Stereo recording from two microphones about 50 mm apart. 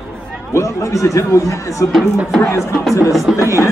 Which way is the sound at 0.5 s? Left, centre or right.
Left.